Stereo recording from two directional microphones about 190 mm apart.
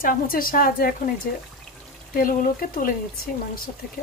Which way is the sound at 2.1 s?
45° left (ahead or behind).